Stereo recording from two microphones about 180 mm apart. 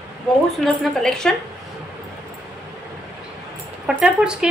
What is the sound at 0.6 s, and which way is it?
Speech, 5° left (ahead or behind).